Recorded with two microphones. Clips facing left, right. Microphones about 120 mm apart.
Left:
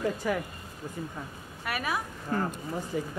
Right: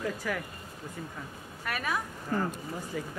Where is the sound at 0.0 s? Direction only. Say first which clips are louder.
Left 4 dB; 25° left (ahead or behind).